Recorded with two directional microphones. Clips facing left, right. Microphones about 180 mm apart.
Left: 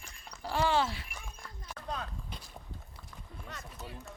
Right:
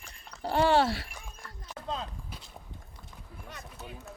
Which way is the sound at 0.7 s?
65° right (ahead or behind).